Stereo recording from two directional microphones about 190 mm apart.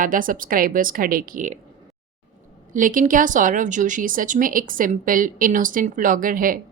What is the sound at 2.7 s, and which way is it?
Speech, 45° right (ahead or behind).